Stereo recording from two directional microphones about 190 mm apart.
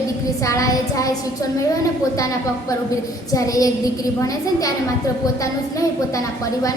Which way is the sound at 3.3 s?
20° left (ahead or behind).